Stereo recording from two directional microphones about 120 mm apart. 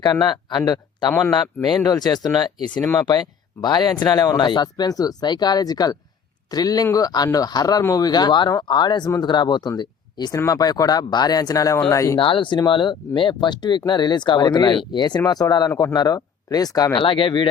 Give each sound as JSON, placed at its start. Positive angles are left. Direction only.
{"t": 0.0, "sound": "speech", "side_deg": 35}
{"t": 12.2, "sound": "speech", "side_deg": 45}
{"t": 17.0, "sound": "speech", "side_deg": 45}